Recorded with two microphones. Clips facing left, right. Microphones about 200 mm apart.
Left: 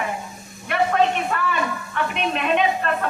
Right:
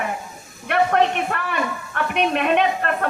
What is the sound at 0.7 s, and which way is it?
A woman's voice, 60° right (ahead or behind).